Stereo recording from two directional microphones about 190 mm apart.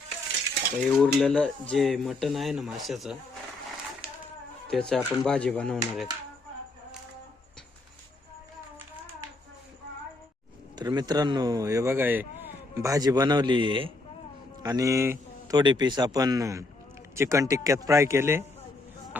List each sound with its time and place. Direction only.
0.9 s speech: centre (ahead or behind)
4.7 s speech: 5° left (ahead or behind)
10.8 s a man's voice: 20° right (ahead or behind)